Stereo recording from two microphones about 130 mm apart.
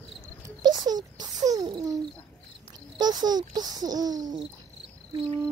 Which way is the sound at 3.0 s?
30° right (ahead or behind).